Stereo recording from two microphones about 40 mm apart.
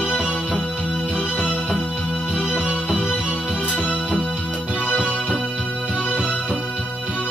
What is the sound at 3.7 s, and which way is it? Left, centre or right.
Music, left.